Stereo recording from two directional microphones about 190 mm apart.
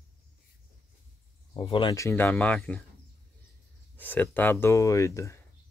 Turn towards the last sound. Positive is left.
turn(degrees=15)  # may be behind; listen again after turning